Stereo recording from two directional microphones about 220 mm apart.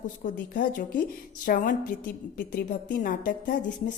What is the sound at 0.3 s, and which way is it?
Speech, 35° left (ahead or behind).